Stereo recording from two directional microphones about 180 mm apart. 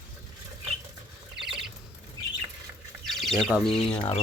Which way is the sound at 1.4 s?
Centre (ahead or behind).